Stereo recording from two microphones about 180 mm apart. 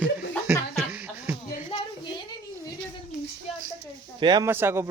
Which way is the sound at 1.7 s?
25° left (ahead or behind).